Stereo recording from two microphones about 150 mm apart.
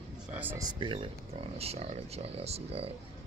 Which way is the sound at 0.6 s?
30° right (ahead or behind).